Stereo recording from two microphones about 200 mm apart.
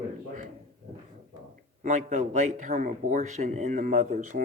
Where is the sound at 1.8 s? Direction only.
35° right (ahead or behind).